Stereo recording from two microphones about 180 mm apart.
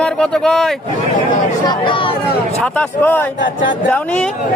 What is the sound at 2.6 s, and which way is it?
Speech, 10° left (ahead or behind).